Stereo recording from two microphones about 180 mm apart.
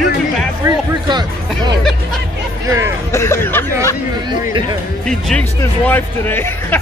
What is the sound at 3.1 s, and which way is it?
Speech, 15° left (ahead or behind).